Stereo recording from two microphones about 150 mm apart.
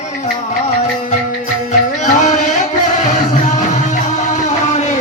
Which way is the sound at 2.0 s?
55° left (ahead or behind).